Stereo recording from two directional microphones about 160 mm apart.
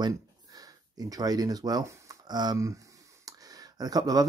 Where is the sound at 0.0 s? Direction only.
25° right (ahead or behind).